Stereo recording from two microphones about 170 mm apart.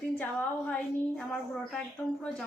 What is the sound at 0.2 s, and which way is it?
Speech, 10° left (ahead or behind).